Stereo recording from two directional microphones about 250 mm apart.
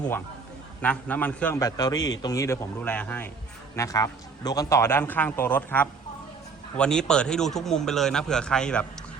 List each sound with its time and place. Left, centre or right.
0.8 s a man's voice: centre